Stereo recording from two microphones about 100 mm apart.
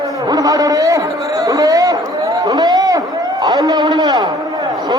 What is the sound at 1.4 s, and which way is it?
Chatter, 35° right (ahead or behind).